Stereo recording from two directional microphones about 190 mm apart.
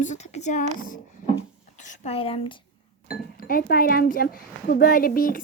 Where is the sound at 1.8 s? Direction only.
35° left (ahead or behind).